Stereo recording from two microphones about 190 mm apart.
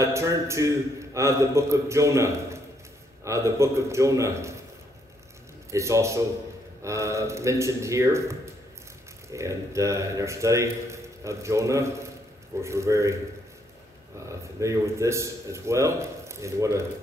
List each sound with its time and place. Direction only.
0.0 s a man's voice: 15° right (ahead or behind)
5.7 s a man's voice: 15° right (ahead or behind)
14.6 s a man's voice: 15° right (ahead or behind)